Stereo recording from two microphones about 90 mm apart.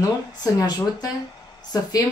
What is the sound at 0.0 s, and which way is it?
Speech, 40° left (ahead or behind).